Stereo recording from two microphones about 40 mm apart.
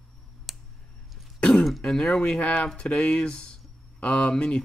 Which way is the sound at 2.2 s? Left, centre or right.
Left.